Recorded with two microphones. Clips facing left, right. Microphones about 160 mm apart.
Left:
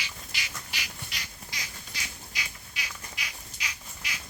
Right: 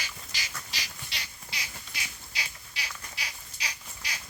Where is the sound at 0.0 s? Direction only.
40° right (ahead or behind).